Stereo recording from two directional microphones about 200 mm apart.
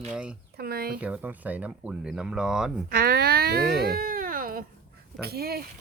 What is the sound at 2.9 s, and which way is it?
Speech, 50° right (ahead or behind).